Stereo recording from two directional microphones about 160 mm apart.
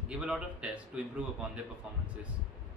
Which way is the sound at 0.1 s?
5° right (ahead or behind).